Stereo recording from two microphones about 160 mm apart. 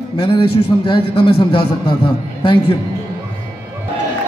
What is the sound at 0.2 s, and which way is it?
A man's voice, 35° left (ahead or behind).